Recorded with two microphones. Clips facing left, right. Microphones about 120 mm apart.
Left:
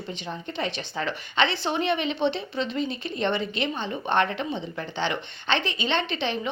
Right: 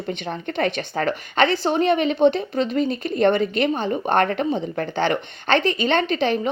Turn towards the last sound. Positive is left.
turn(degrees=-45)  # may be behind; listen again after turning